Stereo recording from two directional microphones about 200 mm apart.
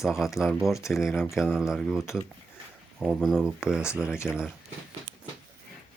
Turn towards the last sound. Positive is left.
turn(degrees=-5)  # may be behind; listen again after turning